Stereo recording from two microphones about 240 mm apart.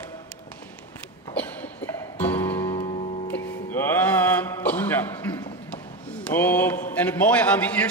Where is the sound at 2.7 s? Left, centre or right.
Left.